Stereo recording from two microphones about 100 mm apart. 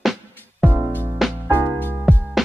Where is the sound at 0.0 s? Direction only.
Centre (ahead or behind).